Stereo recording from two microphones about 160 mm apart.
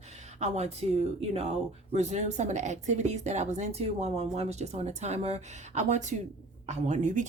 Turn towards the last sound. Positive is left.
turn(degrees=-50)  # may be behind; listen again after turning